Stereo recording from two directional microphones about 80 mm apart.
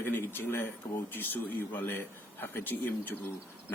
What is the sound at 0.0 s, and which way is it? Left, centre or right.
A man's voice, left.